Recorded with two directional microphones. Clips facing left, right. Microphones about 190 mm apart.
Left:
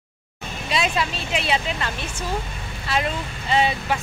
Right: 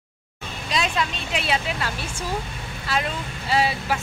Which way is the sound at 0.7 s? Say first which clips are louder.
Left 1 dB; 5° left (ahead or behind).